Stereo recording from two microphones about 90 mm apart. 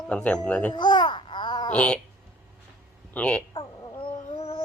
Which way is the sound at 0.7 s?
55° left (ahead or behind).